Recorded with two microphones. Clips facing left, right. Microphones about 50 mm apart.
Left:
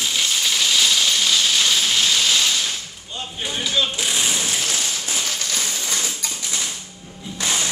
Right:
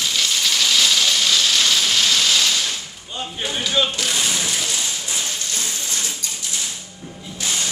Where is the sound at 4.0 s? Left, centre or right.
Centre.